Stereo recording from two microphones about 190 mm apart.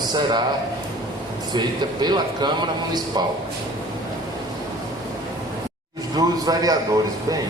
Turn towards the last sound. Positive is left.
turn(degrees=-20)  # may be behind; listen again after turning